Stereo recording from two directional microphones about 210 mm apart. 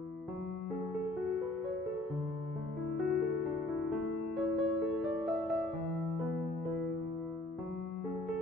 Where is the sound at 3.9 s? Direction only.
Centre (ahead or behind).